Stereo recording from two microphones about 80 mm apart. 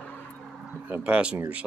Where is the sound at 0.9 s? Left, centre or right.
Centre.